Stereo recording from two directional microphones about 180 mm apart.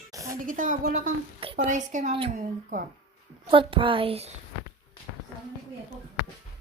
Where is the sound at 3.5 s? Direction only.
30° right (ahead or behind).